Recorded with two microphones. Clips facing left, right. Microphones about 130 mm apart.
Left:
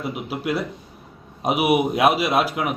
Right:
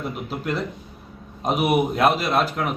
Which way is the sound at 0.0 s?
10° left (ahead or behind).